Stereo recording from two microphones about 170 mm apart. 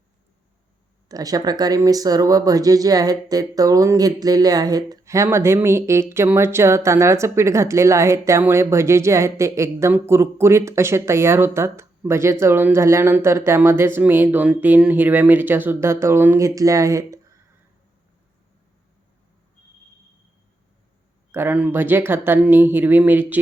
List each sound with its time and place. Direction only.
1.0 s speech: 20° right (ahead or behind)
21.3 s speech: 10° right (ahead or behind)